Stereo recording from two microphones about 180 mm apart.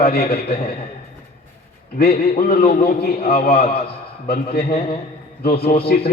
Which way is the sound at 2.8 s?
60° left (ahead or behind).